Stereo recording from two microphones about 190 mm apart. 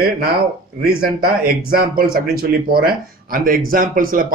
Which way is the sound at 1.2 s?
50° right (ahead or behind).